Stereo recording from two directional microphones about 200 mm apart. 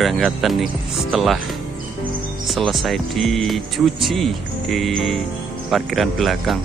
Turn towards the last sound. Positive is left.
turn(degrees=0)  # may be behind; listen again after turning